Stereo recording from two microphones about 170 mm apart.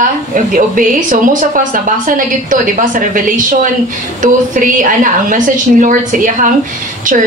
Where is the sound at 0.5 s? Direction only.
50° right (ahead or behind).